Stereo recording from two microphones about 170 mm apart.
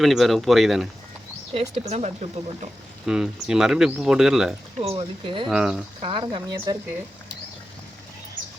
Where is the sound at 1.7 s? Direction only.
40° right (ahead or behind).